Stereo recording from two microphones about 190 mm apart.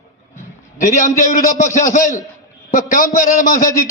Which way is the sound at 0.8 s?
40° left (ahead or behind).